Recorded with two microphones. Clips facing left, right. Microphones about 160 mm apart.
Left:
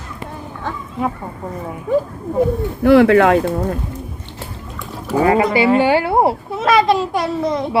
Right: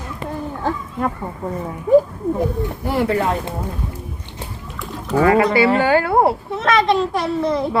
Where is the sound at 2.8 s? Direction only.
85° left.